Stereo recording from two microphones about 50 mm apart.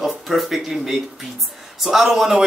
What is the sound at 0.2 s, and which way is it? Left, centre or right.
Speech, centre.